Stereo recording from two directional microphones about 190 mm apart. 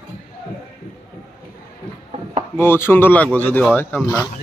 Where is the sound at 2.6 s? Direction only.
10° left (ahead or behind).